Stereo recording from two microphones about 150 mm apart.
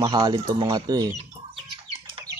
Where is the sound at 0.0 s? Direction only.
30° right (ahead or behind).